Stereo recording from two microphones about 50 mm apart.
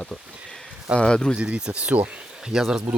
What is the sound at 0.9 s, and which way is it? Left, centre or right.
Speech, centre.